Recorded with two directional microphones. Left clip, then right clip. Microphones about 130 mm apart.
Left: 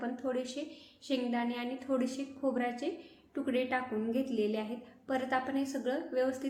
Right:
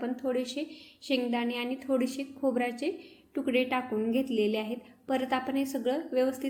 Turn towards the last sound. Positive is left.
turn(degrees=-25)  # may be behind; listen again after turning